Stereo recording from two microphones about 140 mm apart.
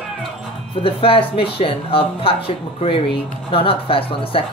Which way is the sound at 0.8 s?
40° left (ahead or behind).